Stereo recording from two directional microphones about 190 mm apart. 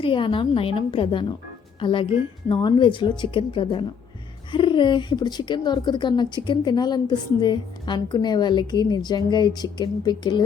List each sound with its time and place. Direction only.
0.0 s a woman's voice: 25° left (ahead or behind)